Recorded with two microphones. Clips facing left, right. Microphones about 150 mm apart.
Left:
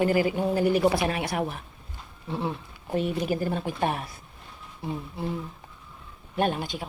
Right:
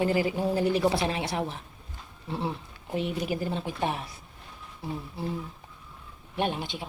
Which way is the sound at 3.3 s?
50° left (ahead or behind).